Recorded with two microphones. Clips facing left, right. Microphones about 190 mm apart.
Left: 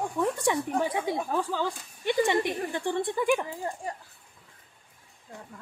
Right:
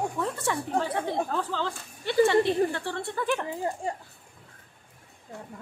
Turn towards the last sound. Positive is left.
turn(degrees=-25)  # may be behind; listen again after turning